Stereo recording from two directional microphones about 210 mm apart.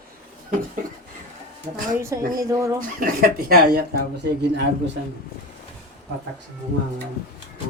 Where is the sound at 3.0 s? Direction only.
45° right (ahead or behind).